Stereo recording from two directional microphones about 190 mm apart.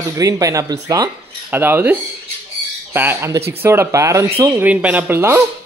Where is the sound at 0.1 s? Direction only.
15° right (ahead or behind).